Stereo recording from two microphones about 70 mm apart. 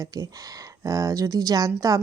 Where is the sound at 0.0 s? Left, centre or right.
Right.